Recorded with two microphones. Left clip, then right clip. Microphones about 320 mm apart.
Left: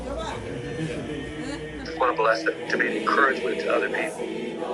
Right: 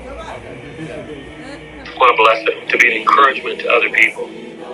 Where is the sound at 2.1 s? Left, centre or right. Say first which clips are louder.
Right 9 dB; right.